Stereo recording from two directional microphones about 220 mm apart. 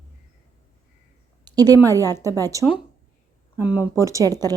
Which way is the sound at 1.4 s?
15° right (ahead or behind).